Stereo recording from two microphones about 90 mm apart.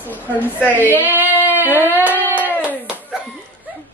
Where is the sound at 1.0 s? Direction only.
20° right (ahead or behind).